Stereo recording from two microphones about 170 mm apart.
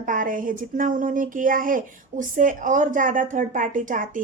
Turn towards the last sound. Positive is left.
turn(degrees=-50)  # may be behind; listen again after turning